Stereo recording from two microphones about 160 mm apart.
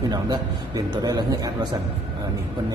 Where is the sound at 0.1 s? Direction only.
25° right (ahead or behind).